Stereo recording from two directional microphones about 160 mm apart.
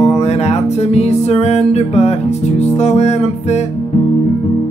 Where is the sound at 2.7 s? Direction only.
40° left (ahead or behind).